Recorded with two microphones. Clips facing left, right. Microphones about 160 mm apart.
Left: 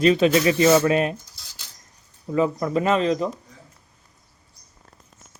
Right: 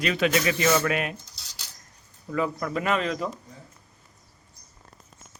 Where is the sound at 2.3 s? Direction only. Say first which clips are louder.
Left 6 dB; 25° left (ahead or behind).